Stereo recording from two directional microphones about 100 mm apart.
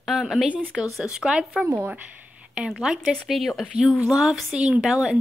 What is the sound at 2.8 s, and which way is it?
A woman's voice, 5° right (ahead or behind).